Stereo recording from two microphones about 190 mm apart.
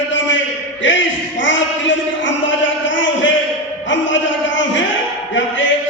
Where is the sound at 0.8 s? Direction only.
75° left (ahead or behind).